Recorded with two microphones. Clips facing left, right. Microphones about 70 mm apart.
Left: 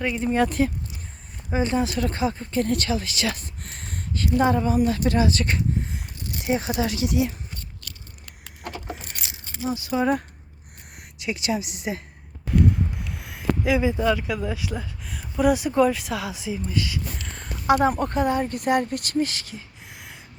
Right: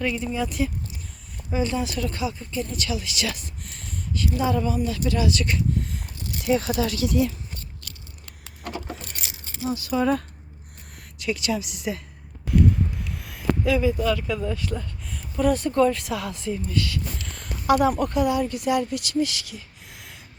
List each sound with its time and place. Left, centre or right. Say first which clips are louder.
0.0 s speech: even; left
0.6 s speech: left 4 dB; left
1.5 s speech: left 2 dB; left
3.9 s a sound: left 4 dB; left
4.5 s speech: left 3 dB; left
6.4 s speech: right 2 dB; left
9.6 s speech: even; centre
13.1 s a sound: even; centre
14.3 s speech: right 1 dB; centre
16.7 s speech: even; centre; by 19.6 s left